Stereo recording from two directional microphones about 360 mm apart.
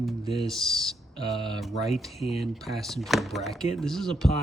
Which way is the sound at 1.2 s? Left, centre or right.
Centre.